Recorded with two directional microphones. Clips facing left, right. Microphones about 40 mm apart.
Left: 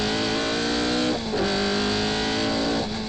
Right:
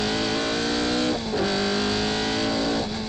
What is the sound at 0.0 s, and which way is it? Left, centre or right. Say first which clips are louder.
Vehicle: even; left.